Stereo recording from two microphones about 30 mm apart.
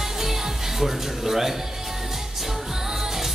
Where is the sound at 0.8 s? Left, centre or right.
Centre.